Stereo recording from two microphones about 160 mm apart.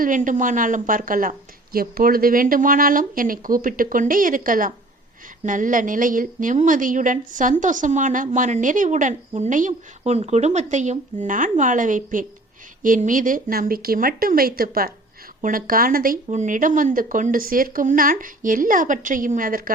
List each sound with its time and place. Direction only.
0.0 s a woman's voice: 55° right (ahead or behind)